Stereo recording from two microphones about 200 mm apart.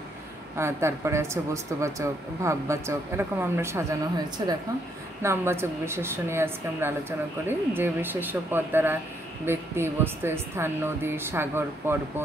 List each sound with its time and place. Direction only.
0.6 s speech: 15° right (ahead or behind)